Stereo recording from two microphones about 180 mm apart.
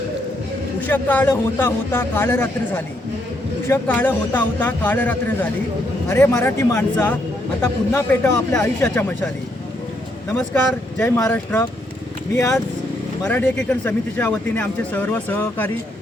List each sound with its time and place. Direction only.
0.8 s speech: 10° left (ahead or behind)
10.3 s speech: 10° left (ahead or behind)